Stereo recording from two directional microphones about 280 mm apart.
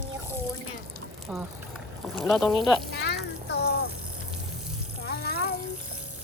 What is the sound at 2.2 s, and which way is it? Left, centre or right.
Speech, centre.